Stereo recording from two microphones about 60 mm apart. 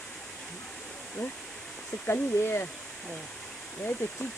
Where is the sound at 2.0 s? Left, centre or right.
Left.